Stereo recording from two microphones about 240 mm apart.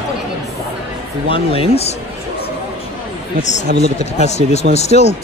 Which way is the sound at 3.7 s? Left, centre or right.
Right.